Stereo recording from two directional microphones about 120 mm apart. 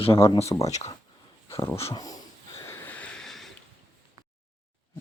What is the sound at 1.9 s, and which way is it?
Speech, 30° left (ahead or behind).